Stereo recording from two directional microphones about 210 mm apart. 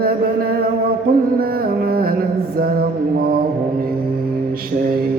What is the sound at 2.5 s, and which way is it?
Mantra, 45° right (ahead or behind).